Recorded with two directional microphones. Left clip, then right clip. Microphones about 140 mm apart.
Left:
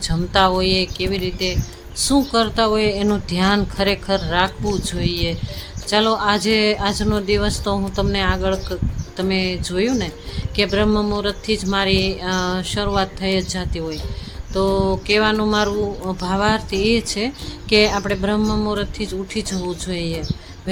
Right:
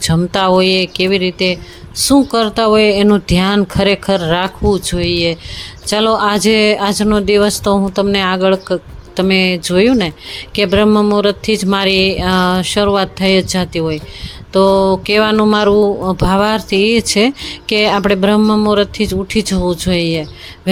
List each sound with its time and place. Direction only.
0.0 s speech: 45° right (ahead or behind)
10.8 s speech: 40° right (ahead or behind)
11.1 s speech: 55° right (ahead or behind)